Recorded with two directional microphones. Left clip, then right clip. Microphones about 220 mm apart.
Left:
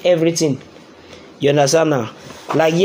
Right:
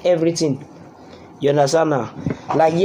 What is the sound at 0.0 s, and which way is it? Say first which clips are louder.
Speech: left 2 dB; 25° left (ahead or behind).